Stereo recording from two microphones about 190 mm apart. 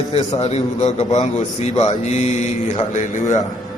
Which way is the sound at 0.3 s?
35° left (ahead or behind).